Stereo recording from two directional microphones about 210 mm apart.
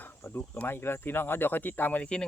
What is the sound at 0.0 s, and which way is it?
Speech, 10° left (ahead or behind).